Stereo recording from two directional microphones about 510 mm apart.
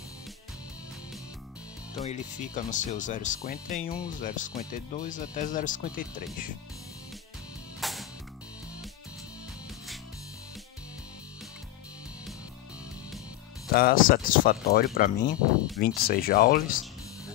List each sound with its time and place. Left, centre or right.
2.0 s speech: centre
7.8 s music: centre
13.7 s speech: centre